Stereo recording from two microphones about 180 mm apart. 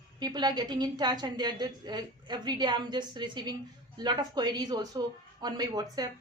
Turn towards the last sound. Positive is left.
turn(degrees=-20)  # may be behind; listen again after turning